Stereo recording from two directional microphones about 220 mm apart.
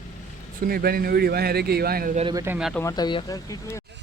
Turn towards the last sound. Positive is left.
turn(degrees=15)  # may be behind; listen again after turning